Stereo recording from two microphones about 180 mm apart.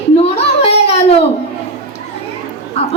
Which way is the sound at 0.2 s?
35° left (ahead or behind).